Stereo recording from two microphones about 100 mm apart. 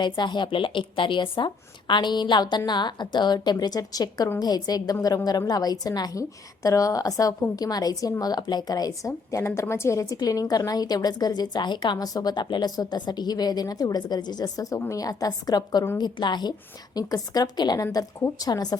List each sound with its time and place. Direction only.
0.0 s a woman's voice: 50° left (ahead or behind)